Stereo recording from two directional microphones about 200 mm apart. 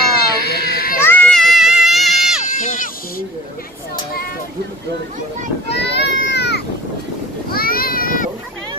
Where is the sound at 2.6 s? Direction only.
40° left (ahead or behind).